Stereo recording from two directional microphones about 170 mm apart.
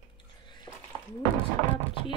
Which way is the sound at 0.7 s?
25° left (ahead or behind).